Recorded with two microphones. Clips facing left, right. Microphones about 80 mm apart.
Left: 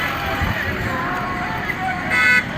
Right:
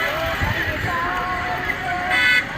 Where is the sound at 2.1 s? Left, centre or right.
Centre.